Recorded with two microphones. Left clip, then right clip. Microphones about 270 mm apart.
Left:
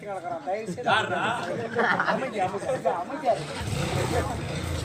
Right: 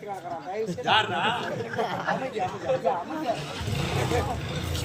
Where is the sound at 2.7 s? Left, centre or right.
Centre.